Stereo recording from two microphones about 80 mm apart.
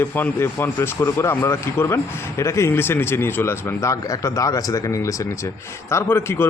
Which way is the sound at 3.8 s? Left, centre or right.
Left.